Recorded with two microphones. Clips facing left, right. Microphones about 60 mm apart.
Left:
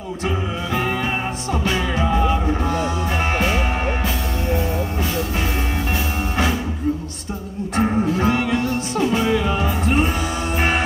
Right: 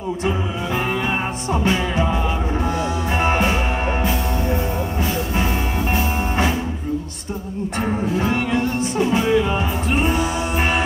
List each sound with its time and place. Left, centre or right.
3.2 s music: centre
8.3 s music: right